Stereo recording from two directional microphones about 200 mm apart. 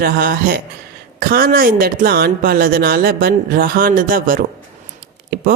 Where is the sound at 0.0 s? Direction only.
50° right (ahead or behind).